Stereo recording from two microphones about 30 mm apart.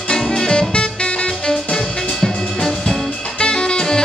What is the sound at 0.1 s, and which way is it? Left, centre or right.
Music, left.